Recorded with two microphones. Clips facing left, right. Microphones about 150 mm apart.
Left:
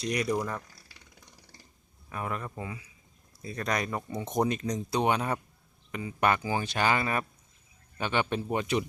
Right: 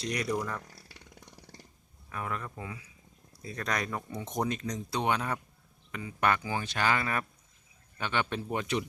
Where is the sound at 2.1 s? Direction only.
15° left (ahead or behind).